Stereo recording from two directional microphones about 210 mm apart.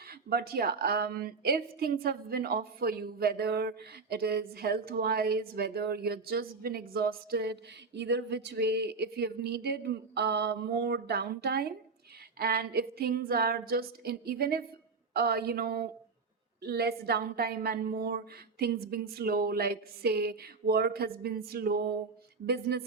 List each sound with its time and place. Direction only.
0.1 s a woman's voice: 45° right (ahead or behind)